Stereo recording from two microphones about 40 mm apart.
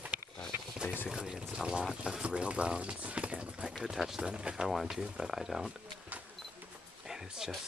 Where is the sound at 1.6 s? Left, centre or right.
Centre.